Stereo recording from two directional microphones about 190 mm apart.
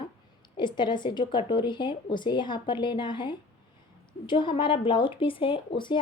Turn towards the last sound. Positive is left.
turn(degrees=25)  # may be behind; listen again after turning